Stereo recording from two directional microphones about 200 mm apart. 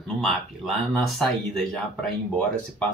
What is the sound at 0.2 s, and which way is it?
Speech, centre (ahead or behind).